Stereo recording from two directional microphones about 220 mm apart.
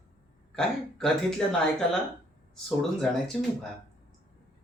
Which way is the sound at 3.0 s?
Centre (ahead or behind).